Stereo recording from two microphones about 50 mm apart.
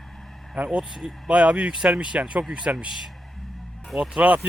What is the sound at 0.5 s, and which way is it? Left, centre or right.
Speech, right.